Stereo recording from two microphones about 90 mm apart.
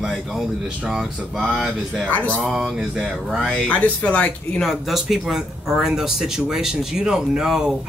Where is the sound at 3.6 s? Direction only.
15° left (ahead or behind).